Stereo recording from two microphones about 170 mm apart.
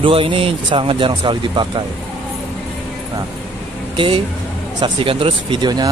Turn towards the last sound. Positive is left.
turn(degrees=-25)  # may be behind; listen again after turning